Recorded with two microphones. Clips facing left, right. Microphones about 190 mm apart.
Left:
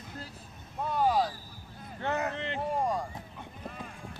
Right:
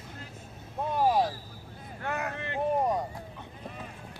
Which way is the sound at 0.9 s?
20° right (ahead or behind).